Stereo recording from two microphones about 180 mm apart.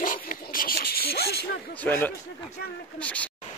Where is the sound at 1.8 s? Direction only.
10° left (ahead or behind).